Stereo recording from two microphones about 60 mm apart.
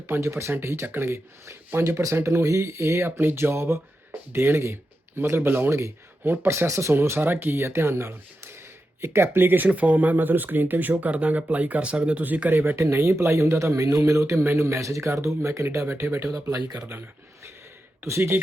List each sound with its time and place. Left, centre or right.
0.1 s speech: right
3.2 s speech: right
7.2 s speech: right
9.6 s speech: right
12.2 s speech: right
12.7 s speech: right
13.8 s a man's voice: right
14.3 s speech: right
16.3 s speech: right
18.0 s speech: right